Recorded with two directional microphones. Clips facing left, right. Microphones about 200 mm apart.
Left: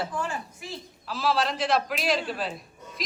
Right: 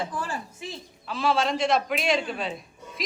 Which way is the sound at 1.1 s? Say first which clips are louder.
Right 2 dB; centre (ahead or behind).